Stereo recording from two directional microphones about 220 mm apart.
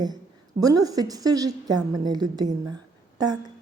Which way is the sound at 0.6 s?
15° right (ahead or behind).